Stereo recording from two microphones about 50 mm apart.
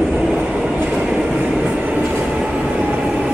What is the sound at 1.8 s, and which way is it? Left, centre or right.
Train, right.